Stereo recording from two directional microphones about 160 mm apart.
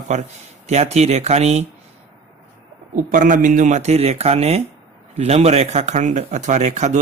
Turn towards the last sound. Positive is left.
turn(degrees=-45)  # may be behind; listen again after turning